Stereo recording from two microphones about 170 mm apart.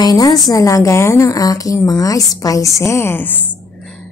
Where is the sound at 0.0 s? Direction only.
20° left (ahead or behind).